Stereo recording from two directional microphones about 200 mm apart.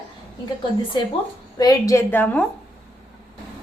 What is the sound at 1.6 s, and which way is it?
Speech, 15° left (ahead or behind).